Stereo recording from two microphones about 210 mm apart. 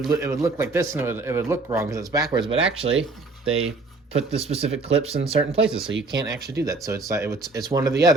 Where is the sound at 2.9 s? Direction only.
70° right (ahead or behind).